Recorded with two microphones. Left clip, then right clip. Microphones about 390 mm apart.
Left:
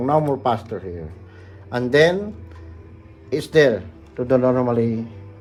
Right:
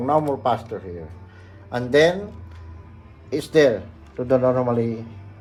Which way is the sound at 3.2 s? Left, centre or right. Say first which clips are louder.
Left 1 dB; left.